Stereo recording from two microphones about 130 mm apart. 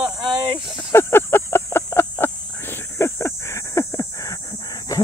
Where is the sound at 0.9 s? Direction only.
20° left (ahead or behind).